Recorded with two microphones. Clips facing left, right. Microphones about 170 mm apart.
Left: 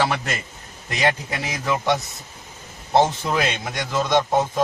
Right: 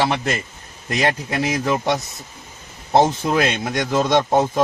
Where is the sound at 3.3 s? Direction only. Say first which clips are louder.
Right 4 dB; 45° right (ahead or behind).